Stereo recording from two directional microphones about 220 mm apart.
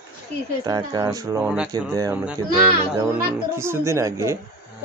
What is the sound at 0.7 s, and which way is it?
A man's voice, 15° right (ahead or behind).